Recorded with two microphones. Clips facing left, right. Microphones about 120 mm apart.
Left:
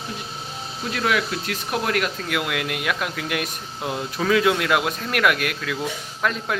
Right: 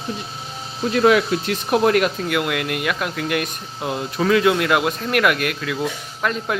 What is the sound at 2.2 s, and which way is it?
Speech, centre (ahead or behind).